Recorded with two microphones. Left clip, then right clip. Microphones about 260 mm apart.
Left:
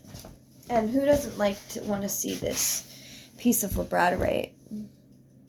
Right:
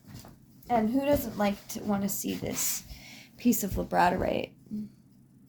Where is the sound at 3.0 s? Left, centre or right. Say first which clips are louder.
Left 1 dB; right.